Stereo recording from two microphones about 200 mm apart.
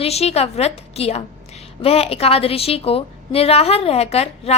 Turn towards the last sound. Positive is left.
turn(degrees=30)  # may be behind; listen again after turning